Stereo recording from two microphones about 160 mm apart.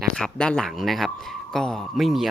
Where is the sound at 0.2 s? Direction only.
5° left (ahead or behind).